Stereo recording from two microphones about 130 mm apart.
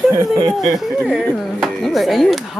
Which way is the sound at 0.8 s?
Centre (ahead or behind).